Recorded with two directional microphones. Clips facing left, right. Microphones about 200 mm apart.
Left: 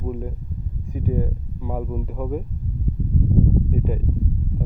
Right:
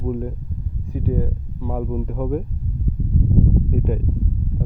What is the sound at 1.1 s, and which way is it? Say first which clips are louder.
Speech: right 1 dB; 15° left (ahead or behind).